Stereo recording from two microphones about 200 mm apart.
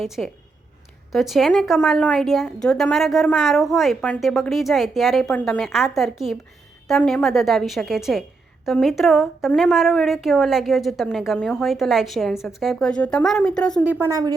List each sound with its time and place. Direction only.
0.0 s a woman's voice: centre (ahead or behind)
14.1 s a woman's voice: 20° right (ahead or behind)